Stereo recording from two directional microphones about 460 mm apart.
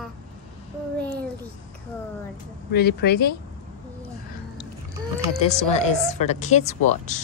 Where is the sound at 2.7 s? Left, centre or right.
Left.